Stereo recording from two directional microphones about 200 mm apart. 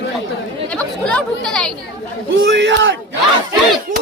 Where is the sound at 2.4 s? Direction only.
60° right (ahead or behind).